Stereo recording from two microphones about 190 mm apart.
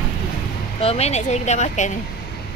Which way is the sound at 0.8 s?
35° left (ahead or behind).